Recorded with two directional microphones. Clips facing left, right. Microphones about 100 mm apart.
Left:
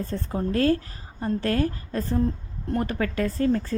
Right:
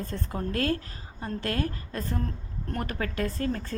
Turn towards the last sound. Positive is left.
turn(degrees=35)  # may be behind; listen again after turning